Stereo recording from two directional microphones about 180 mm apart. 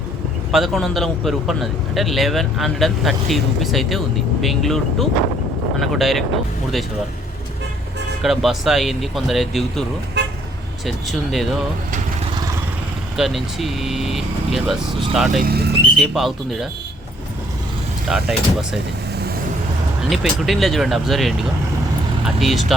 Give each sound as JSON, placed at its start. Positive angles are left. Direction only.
{"t": 0.5, "sound": "a man's voice", "side_deg": 0}
{"t": 8.2, "sound": "a man's voice", "side_deg": 0}
{"t": 10.2, "sound": "toot", "side_deg": -70}
{"t": 10.8, "sound": "a man's voice", "side_deg": 0}
{"t": 13.1, "sound": "a man's voice", "side_deg": 0}
{"t": 15.4, "sound": "speech", "side_deg": -60}
{"t": 16.0, "sound": "a man's voice", "side_deg": 0}
{"t": 18.1, "sound": "a man's voice", "side_deg": 0}
{"t": 20.1, "sound": "a man's voice", "side_deg": 0}